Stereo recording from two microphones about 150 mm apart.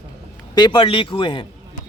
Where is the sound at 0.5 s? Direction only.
30° left (ahead or behind).